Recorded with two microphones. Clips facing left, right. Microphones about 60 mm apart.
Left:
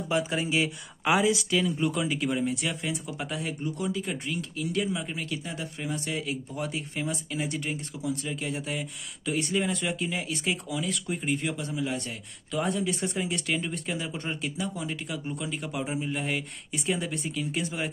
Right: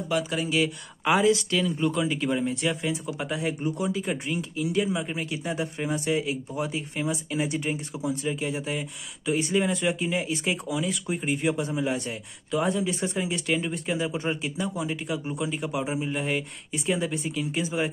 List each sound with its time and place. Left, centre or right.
0.1 s speech: left
1.0 s speech: centre
3.6 s speech: centre
8.5 s speech: centre
12.5 s speech: centre